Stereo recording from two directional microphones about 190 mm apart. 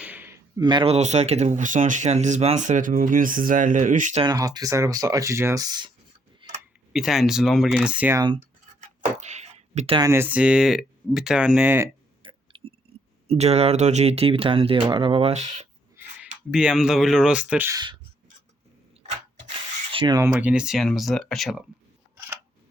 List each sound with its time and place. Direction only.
0.0 s a sound: 10° right (ahead or behind)
0.6 s speech: 25° right (ahead or behind); by 4.2 s 40° right (ahead or behind)
4.2 s speech: 20° right (ahead or behind)
6.4 s tick-tock: 25° right (ahead or behind)
6.9 s speech: centre (ahead or behind)
8.2 s speech: 25° right (ahead or behind)
9.1 s a sound: 35° right (ahead or behind)
10.1 s speech: 10° right (ahead or behind)
12.2 s a sound: 25° right (ahead or behind)
13.2 s speech: 35° right (ahead or behind)
16.0 s speech: 5° right (ahead or behind)
19.5 s a sound: 25° right (ahead or behind)
20.3 s speech: 5° right (ahead or behind)